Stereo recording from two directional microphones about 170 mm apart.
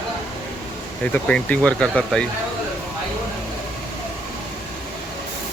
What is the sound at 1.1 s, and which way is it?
Speech, 5° left (ahead or behind).